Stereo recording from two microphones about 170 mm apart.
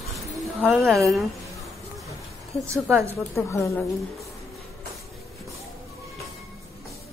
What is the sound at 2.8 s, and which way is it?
Speech, centre (ahead or behind).